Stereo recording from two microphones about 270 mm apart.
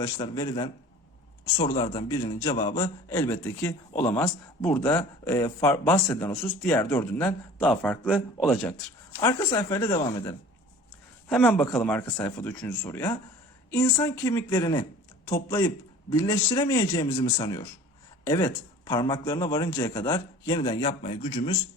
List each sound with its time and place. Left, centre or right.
0.0 s speech: centre
9.2 s speech: centre